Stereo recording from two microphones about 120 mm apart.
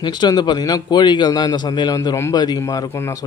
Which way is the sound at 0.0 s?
35° left (ahead or behind).